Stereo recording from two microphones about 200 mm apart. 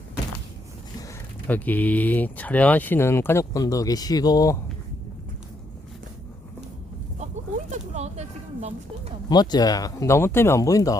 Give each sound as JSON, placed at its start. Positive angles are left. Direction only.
{"t": 1.5, "sound": "speech", "side_deg": 10}
{"t": 7.7, "sound": "a sound", "side_deg": -35}
{"t": 9.3, "sound": "speech", "side_deg": 20}